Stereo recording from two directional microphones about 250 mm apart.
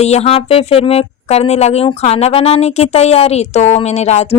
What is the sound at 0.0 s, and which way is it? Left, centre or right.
Speech, left.